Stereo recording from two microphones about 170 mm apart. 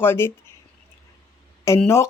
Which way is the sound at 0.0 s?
15° left (ahead or behind).